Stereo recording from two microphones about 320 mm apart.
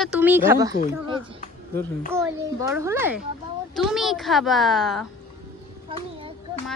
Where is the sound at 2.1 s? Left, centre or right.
Centre.